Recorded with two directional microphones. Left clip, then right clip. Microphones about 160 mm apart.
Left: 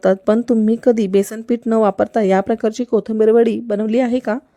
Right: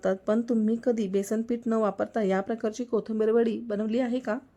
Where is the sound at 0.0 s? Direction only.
55° left (ahead or behind).